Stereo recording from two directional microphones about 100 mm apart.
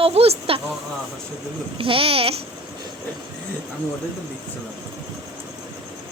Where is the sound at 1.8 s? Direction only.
65° right (ahead or behind).